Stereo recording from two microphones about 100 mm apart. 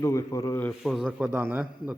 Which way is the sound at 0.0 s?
35° left (ahead or behind).